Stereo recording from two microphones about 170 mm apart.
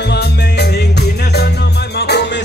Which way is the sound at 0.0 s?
80° left.